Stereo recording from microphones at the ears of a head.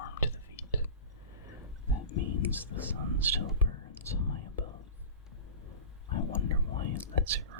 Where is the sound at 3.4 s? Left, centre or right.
Left.